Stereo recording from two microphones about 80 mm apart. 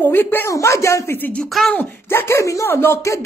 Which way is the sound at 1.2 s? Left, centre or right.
Centre.